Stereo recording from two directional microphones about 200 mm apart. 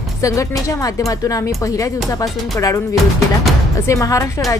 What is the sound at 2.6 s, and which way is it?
A woman's voice, 15° left (ahead or behind).